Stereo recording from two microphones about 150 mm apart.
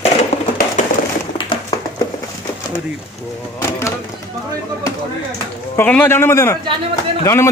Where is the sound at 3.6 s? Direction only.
20° left (ahead or behind).